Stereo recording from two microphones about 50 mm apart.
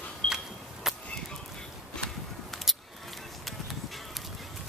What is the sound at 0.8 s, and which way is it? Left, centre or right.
Chop, centre.